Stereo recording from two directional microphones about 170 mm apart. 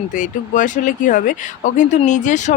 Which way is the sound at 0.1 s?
50° left (ahead or behind).